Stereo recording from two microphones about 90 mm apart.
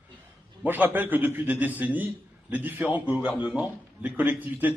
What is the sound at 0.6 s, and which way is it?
A man's voice, 20° right (ahead or behind).